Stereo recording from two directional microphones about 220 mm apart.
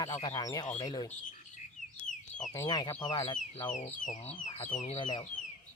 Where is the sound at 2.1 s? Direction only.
90° left.